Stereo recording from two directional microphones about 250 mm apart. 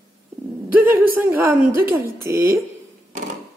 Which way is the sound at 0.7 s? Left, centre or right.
Centre.